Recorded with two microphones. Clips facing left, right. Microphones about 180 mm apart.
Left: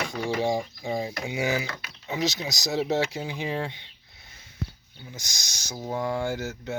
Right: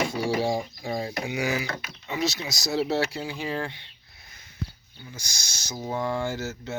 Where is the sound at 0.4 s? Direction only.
15° left (ahead or behind).